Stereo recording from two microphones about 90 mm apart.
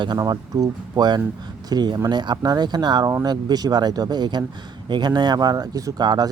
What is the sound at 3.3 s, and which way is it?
Speech, 50° right (ahead or behind).